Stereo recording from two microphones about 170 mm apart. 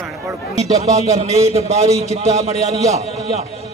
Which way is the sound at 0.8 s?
40° right (ahead or behind).